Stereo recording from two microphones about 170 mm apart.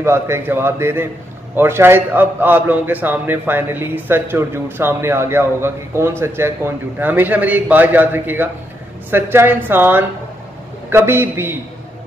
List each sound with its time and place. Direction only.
0.0 s a man's voice: 15° right (ahead or behind)